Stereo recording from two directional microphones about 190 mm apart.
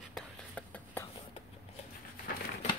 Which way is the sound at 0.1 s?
5° left (ahead or behind).